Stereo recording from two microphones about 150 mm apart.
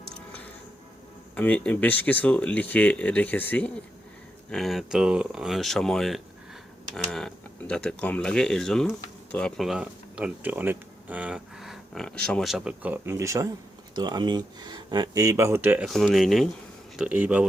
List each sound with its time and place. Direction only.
1.4 s speech: 10° left (ahead or behind)
4.5 s speech: centre (ahead or behind)
15.9 s speech: centre (ahead or behind)